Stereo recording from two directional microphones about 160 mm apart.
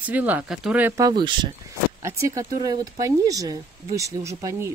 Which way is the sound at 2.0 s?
20° right (ahead or behind).